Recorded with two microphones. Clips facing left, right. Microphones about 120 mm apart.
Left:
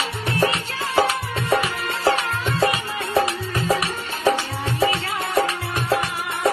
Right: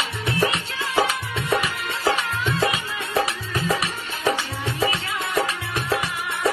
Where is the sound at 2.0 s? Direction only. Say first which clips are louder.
Left 2 dB; 40° left (ahead or behind).